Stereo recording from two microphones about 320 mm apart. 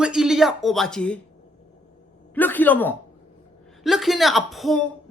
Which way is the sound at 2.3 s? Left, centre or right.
Centre.